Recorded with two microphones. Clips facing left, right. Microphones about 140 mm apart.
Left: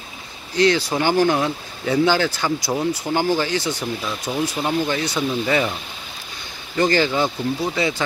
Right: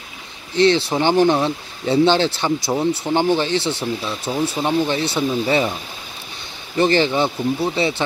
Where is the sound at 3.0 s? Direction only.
20° right (ahead or behind).